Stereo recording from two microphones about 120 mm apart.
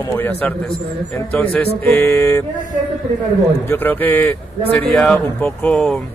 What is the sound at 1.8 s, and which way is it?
Mantra, 20° left (ahead or behind).